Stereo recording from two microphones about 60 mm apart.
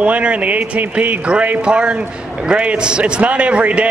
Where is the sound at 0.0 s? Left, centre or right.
Right.